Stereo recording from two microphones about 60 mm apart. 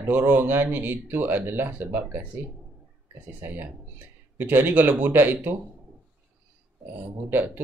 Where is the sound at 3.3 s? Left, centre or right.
Right.